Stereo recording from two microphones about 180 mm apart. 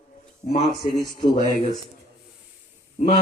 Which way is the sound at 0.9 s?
25° left (ahead or behind).